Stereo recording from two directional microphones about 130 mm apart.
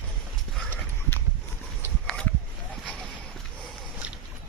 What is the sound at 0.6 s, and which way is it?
Clip-clop, 15° left (ahead or behind).